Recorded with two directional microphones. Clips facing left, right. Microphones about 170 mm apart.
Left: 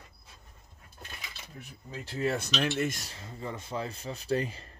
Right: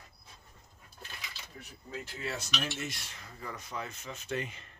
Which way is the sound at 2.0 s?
45° left (ahead or behind).